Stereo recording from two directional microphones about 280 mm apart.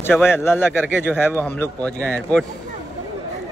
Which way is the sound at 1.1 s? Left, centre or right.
Centre.